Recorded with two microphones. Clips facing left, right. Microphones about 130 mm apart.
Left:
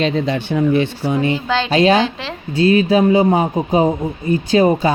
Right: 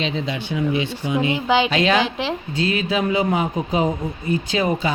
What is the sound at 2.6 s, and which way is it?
Speech, 40° left (ahead or behind).